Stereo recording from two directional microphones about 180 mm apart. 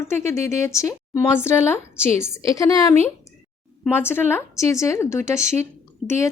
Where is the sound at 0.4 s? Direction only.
15° left (ahead or behind).